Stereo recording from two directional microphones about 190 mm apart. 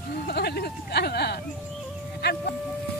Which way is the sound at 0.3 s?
60° left (ahead or behind).